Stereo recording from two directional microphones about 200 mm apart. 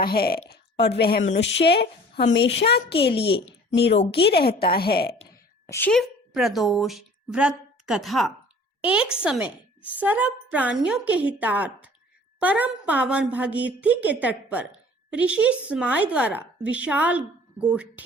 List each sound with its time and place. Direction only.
0.0 s a woman's voice: 50° left (ahead or behind)
3.9 s speech: 30° left (ahead or behind)
4.2 s a woman's voice: 55° left (ahead or behind)
5.7 s a woman's voice: 5° left (ahead or behind)